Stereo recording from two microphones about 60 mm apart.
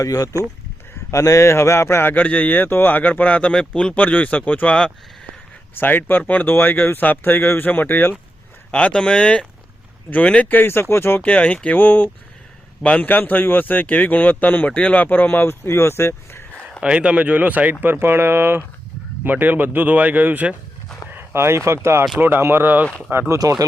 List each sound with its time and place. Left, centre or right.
0.0 s speech: left
1.1 s a man's voice: left
2.2 s speech: left
5.7 s speech: left
8.7 s speech: left
10.5 s speech: left
11.2 s speech: left
16.8 s speech: centre
21.1 s speech: right
23.4 s speech: right